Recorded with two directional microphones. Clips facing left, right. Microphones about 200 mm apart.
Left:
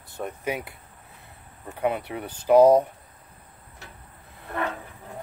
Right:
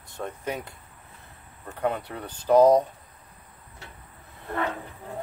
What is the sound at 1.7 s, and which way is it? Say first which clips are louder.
Speech: left 2 dB; 15° left (ahead or behind).